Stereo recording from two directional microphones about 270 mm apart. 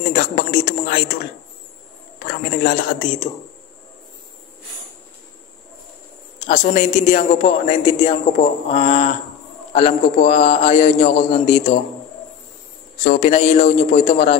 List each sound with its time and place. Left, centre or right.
0.1 s a man's voice: left
2.1 s speech: left
6.4 s a man's voice: left
13.0 s a man's voice: left